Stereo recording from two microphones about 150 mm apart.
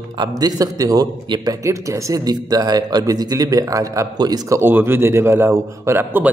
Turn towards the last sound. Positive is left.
turn(degrees=-15)  # may be behind; listen again after turning